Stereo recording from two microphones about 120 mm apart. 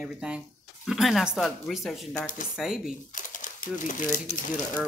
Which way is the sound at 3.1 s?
90° left.